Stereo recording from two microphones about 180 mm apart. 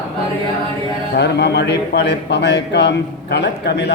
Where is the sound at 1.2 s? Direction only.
70° left (ahead or behind).